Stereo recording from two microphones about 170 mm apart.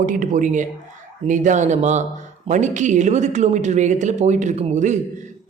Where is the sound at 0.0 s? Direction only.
50° right (ahead or behind).